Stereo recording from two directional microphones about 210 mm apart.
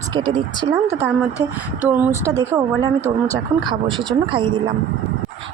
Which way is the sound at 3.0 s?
10° left (ahead or behind).